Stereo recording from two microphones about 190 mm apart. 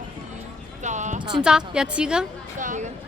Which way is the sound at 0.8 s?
40° right (ahead or behind).